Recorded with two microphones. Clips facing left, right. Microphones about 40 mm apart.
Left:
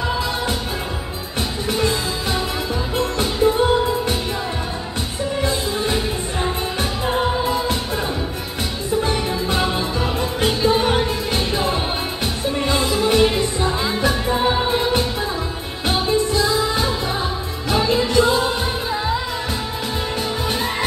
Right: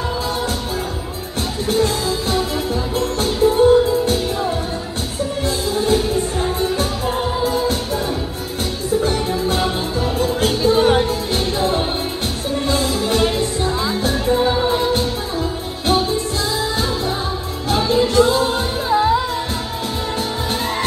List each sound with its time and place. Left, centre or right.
1.7 s music: left
5.4 s music: left
9.0 s music: left
15.9 s music: left
18.9 s music: centre